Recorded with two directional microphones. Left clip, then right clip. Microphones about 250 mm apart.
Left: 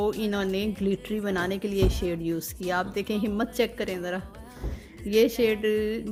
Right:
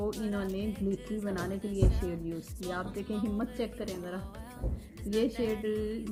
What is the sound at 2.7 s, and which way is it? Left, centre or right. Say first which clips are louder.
A woman's voice: left 9 dB; left.